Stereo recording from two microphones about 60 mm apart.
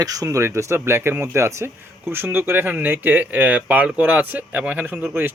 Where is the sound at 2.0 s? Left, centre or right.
Right.